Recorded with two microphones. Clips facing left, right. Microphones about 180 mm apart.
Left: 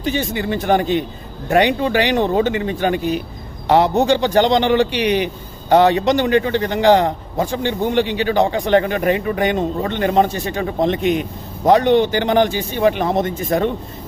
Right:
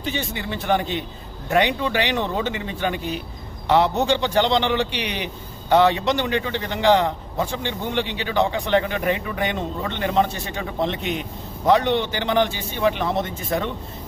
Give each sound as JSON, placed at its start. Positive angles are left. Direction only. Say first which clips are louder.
{"t": 0.0, "sound": "speech", "louder": "left 7 dB", "side_deg": 45}